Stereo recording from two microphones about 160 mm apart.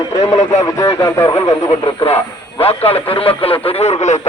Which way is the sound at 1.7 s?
40° left (ahead or behind).